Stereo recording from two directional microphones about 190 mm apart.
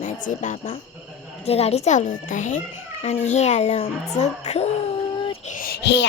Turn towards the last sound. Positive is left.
turn(degrees=65)  # may be behind; listen again after turning